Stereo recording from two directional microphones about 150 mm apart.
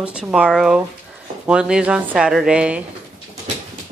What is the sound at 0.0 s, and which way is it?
Speech, 5° right (ahead or behind).